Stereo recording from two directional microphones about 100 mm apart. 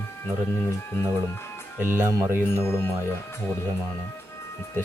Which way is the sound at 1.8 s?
20° right (ahead or behind).